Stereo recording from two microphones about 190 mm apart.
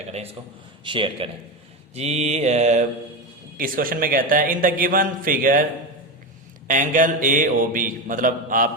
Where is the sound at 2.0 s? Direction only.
35° right (ahead or behind).